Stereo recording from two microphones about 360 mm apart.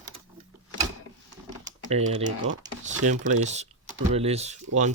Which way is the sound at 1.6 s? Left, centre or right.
Centre.